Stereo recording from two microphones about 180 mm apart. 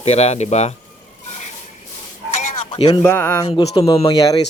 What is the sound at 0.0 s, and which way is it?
Speech, 35° left (ahead or behind).